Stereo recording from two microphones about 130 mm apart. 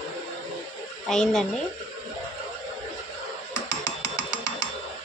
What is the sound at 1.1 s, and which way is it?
Speech, 5° left (ahead or behind).